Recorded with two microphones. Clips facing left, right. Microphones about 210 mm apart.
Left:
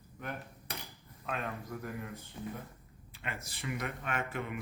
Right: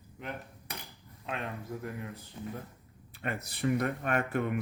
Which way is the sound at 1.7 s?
25° right (ahead or behind).